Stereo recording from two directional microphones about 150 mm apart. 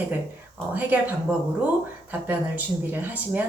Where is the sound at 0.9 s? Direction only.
10° right (ahead or behind).